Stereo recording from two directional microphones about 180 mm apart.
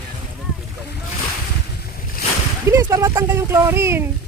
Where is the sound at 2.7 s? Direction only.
15° right (ahead or behind).